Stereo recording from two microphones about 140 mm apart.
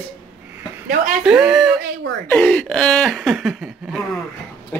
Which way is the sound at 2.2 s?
10° left (ahead or behind).